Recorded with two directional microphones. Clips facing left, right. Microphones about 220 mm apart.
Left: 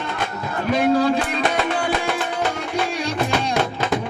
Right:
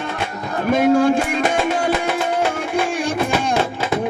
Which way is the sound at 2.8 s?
50° right (ahead or behind).